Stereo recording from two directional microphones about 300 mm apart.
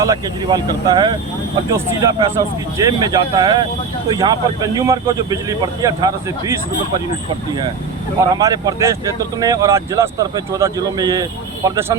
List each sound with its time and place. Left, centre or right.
0.0 s a man's voice: centre
8.4 s a man's voice: centre